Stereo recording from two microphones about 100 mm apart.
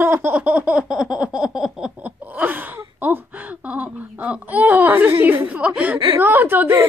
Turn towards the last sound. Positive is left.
turn(degrees=-20)  # may be behind; listen again after turning